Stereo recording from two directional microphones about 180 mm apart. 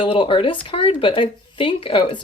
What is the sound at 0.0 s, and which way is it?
Speech, 30° left (ahead or behind).